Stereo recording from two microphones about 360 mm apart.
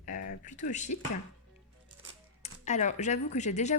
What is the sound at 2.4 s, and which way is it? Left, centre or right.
Speech, centre.